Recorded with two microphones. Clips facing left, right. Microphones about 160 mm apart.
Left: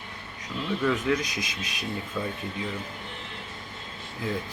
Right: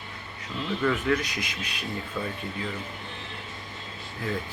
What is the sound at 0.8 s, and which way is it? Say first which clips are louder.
Speech: even; 10° left (ahead or behind).